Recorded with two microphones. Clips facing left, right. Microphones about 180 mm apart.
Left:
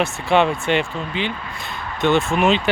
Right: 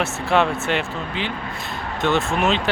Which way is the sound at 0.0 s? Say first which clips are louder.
Left 2 dB; centre (ahead or behind).